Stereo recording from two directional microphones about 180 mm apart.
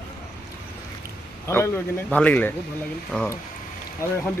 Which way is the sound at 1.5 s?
15° left (ahead or behind).